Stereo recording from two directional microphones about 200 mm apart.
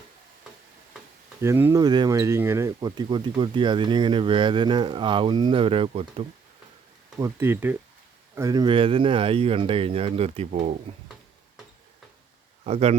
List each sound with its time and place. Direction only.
1.4 s speech: 10° right (ahead or behind); by 6.2 s 30° right (ahead or behind)
7.2 s speech: 15° right (ahead or behind); by 10.8 s 35° right (ahead or behind)
12.6 s speech: 30° right (ahead or behind)